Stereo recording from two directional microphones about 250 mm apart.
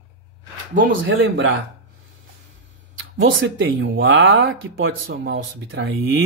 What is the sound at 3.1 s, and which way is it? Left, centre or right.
Speech, right.